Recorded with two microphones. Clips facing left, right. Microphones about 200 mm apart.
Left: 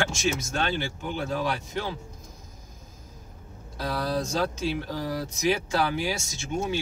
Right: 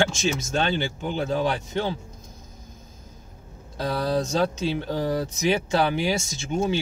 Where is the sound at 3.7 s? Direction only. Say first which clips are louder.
Right 4 dB; 25° right (ahead or behind).